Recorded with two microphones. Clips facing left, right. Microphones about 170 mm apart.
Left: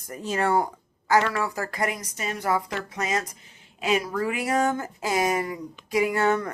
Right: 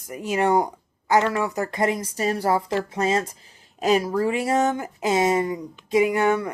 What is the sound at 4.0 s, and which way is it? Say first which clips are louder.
Speech: right 5 dB; 30° right (ahead or behind).